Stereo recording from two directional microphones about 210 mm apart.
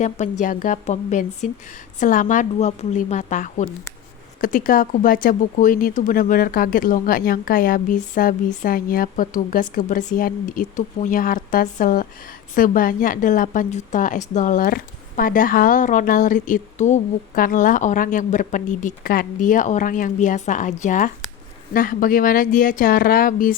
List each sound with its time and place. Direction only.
0.0 s a woman's voice: 35° left (ahead or behind)